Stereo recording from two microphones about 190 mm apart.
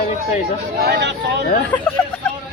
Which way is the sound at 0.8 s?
55° right (ahead or behind).